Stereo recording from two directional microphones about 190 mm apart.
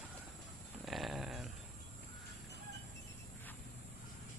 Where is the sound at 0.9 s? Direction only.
Centre (ahead or behind).